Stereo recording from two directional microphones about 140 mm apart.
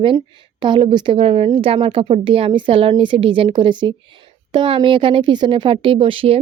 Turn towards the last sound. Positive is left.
turn(degrees=-40)  # may be behind; listen again after turning